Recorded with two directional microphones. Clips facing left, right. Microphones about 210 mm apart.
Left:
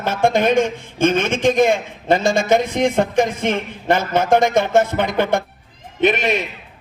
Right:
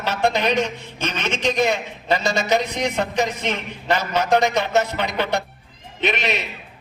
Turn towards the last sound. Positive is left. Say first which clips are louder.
# left 6 dB
turn(degrees=50)  # may be behind; listen again after turning